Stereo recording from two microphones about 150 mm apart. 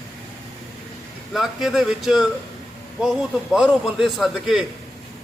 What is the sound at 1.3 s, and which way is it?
A man's voice, centre (ahead or behind).